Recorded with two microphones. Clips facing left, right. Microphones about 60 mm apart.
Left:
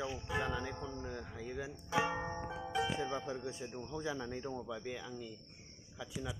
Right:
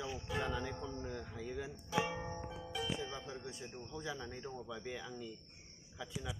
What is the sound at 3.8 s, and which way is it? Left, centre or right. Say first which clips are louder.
Speech: left 4 dB; left.